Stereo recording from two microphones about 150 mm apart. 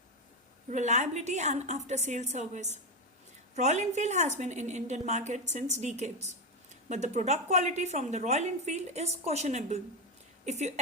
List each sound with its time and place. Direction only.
0.7 s a woman's voice: 50° right (ahead or behind)